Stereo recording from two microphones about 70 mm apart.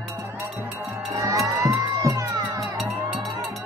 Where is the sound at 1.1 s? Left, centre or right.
Right.